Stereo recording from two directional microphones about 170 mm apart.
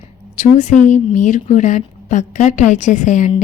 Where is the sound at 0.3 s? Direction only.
45° left (ahead or behind).